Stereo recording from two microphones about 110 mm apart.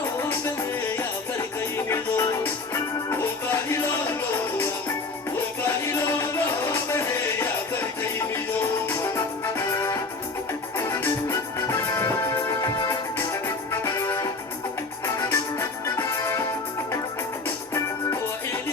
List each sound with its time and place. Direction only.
1.7 s music: 25° left (ahead or behind)
17.7 s music: 30° left (ahead or behind)